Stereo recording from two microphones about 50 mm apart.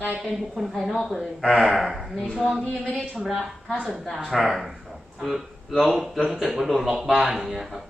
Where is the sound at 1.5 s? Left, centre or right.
Centre.